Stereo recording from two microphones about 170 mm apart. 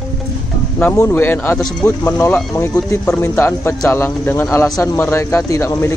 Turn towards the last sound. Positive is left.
turn(degrees=15)  # may be behind; listen again after turning